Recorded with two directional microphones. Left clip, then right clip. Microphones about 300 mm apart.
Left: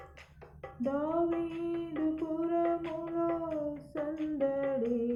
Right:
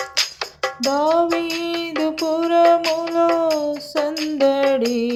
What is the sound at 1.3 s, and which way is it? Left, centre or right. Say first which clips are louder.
Child singing: right 13 dB; right.